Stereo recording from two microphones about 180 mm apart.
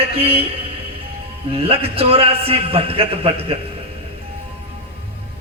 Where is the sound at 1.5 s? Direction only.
30° right (ahead or behind).